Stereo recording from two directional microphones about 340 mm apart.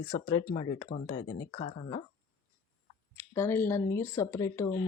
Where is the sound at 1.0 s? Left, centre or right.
Left.